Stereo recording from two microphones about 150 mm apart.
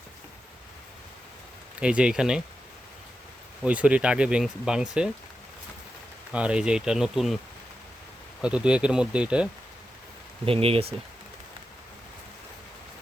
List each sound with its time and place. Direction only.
1.8 s speech: 5° right (ahead or behind)
3.6 s speech: 10° right (ahead or behind)
6.3 s speech: 5° right (ahead or behind)
8.4 s speech: 5° right (ahead or behind)
10.4 s speech: 40° right (ahead or behind)